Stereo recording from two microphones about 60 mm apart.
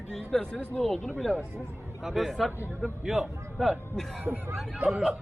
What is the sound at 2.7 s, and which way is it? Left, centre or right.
Speech, centre.